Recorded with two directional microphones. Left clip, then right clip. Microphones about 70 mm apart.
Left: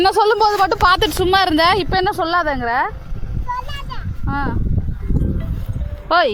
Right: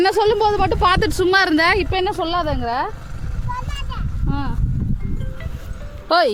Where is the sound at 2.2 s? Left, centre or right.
Left.